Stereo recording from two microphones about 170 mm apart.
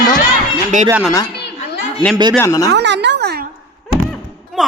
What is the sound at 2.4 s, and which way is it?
Speech, 20° left (ahead or behind).